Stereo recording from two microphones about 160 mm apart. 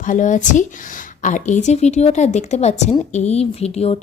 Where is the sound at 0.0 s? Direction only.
50° left (ahead or behind).